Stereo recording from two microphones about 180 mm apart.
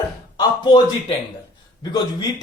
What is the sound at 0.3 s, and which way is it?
A man's voice, 25° left (ahead or behind).